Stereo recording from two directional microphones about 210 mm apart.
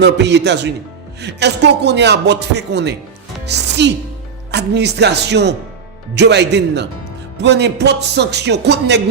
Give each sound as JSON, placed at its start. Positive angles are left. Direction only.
{"t": 0.0, "sound": "a man's voice", "side_deg": -55}